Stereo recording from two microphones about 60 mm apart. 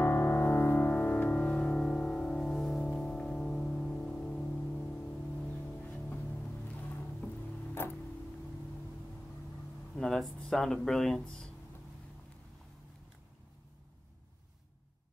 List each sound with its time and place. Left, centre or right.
0.0 s music: left
1.4 s music: centre
2.8 s music: centre
5.5 s music: left
7.8 s music: left
9.9 s speech: centre